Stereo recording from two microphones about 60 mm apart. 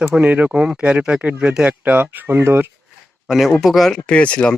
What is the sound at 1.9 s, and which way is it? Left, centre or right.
Speech, right.